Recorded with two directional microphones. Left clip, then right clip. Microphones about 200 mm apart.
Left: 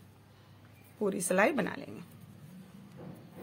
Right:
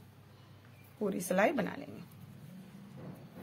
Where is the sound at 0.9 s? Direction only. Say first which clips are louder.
Left 3 dB; 20° left (ahead or behind).